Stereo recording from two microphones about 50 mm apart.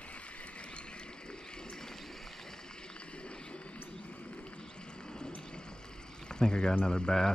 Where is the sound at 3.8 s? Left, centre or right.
Left.